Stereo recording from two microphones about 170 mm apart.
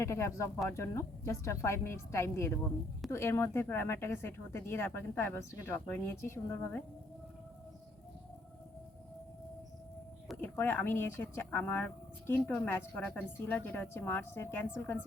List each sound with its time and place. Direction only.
0.0 s a woman's voice: 15° left (ahead or behind)
10.5 s a woman's voice: 10° left (ahead or behind)